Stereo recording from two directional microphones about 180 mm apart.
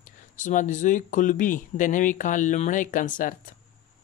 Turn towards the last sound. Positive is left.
turn(degrees=45)  # may be behind; listen again after turning